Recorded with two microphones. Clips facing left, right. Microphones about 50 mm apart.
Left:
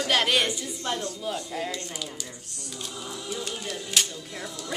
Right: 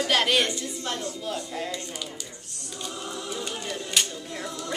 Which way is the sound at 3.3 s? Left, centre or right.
Centre.